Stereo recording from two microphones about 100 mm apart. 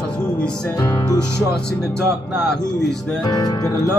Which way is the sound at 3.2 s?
45° left (ahead or behind).